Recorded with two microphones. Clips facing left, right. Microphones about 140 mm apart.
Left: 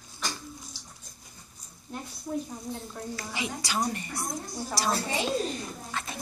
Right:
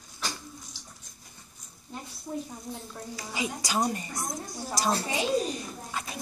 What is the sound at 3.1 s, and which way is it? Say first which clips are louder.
A woman's voice: right 2 dB; 15° right (ahead or behind).